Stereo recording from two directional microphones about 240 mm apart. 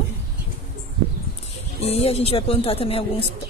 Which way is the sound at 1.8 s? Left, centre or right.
Left.